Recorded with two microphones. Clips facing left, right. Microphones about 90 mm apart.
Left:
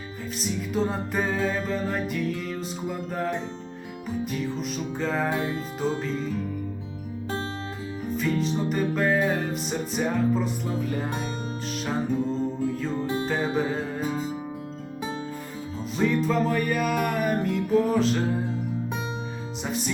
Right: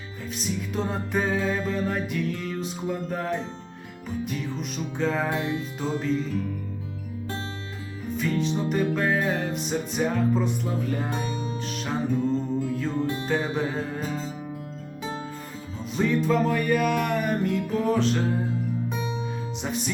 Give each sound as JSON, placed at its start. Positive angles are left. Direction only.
{"t": 0.3, "sound": "music", "side_deg": 0}
{"t": 8.1, "sound": "music", "side_deg": 0}
{"t": 13.2, "sound": "music", "side_deg": 5}
{"t": 14.0, "sound": "music", "side_deg": 15}
{"t": 16.0, "sound": "music", "side_deg": 0}
{"t": 19.6, "sound": "music", "side_deg": 0}